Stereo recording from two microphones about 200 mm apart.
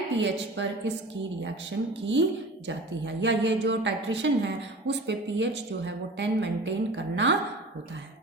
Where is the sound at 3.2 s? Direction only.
60° right (ahead or behind).